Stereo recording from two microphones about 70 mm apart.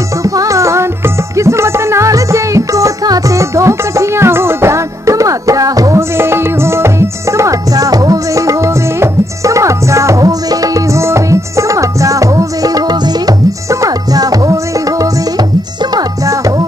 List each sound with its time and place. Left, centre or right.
0.2 s music: right
5.9 s music: right
11.0 s music: right